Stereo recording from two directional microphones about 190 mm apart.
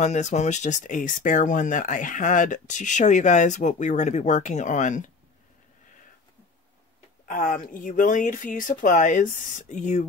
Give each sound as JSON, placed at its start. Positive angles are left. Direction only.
{"t": 0.0, "sound": "speech", "side_deg": 40}
{"t": 7.2, "sound": "speech", "side_deg": 45}